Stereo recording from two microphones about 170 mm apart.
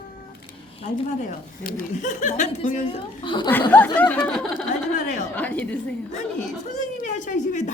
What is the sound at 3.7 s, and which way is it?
A woman's voice, 10° left (ahead or behind).